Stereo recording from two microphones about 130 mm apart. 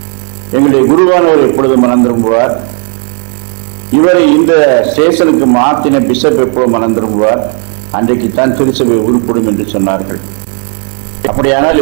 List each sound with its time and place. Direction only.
1.1 s a man's voice: 20° right (ahead or behind)
4.0 s a man's voice: 20° right (ahead or behind)
6.2 s a man's voice: 20° right (ahead or behind)
11.3 s a man's voice: 20° right (ahead or behind)